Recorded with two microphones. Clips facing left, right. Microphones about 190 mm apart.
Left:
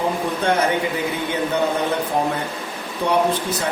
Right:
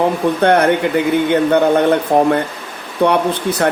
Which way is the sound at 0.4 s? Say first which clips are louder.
Right 7 dB; 65° right (ahead or behind).